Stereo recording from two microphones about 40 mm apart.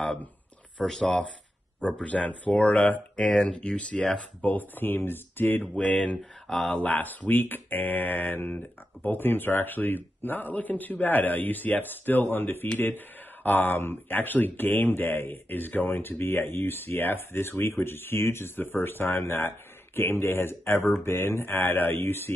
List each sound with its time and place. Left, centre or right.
0.8 s speech: centre
1.8 s speech: left
2.0 s speech: left
4.4 s speech: left
5.7 s speech: centre
6.8 s speech: left
8.4 s speech: left